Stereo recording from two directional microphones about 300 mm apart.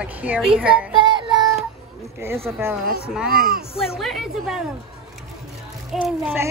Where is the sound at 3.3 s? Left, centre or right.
Right.